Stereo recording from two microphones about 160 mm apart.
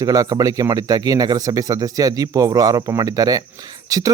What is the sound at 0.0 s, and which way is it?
Speech, 20° right (ahead or behind).